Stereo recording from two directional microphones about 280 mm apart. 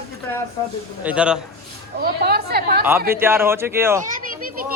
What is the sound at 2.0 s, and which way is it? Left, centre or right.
Speech, right.